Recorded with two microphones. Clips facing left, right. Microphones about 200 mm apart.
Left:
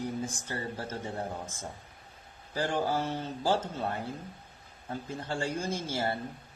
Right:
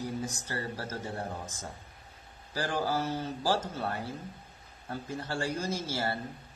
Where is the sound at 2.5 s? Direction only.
20° left (ahead or behind).